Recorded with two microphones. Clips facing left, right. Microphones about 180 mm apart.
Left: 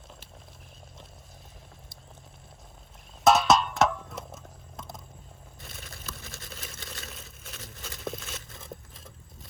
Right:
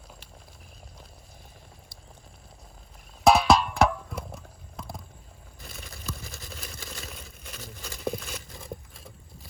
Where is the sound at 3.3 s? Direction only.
Centre (ahead or behind).